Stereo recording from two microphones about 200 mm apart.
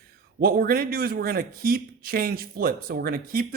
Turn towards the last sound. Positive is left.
turn(degrees=-50)  # may be behind; listen again after turning